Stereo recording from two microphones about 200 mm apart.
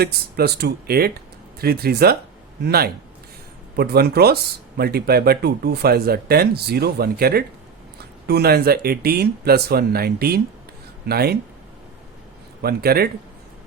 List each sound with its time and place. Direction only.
0.0 s speech: 50° right (ahead or behind)
12.6 s speech: 50° right (ahead or behind)